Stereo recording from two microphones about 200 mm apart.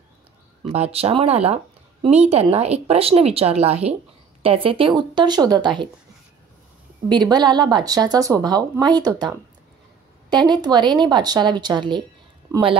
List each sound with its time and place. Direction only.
0.7 s a woman's voice: 30° right (ahead or behind)
7.1 s a woman's voice: 20° right (ahead or behind)